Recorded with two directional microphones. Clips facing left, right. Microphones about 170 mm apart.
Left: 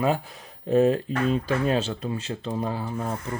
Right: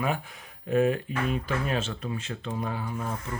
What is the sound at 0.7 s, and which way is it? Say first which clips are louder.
Speech: left 4 dB; 30° left (ahead or behind).